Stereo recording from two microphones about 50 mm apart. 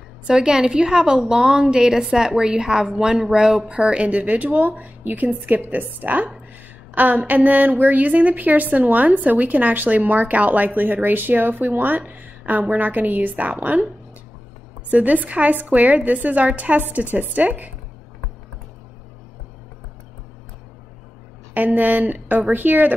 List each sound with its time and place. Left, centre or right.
0.3 s a woman's voice: centre; by 13.7 s right
14.9 s a woman's voice: right
21.5 s a woman's voice: right